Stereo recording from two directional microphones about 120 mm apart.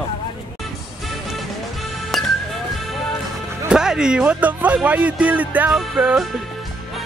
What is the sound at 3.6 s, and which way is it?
Speech, 5° right (ahead or behind).